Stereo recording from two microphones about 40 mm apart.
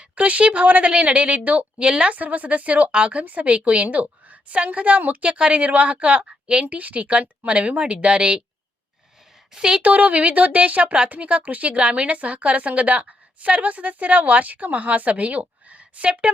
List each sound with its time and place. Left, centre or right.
0.0 s a woman's voice: right
2.1 s speech: right
3.8 s speech: right
6.7 s a woman's voice: right
9.5 s a woman's voice: centre
9.8 s speech: right